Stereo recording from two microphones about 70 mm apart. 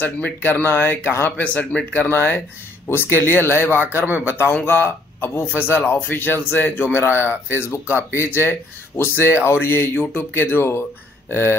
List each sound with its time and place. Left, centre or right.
0.0 s speech: left
1.4 s speech: centre; by 11.5 s left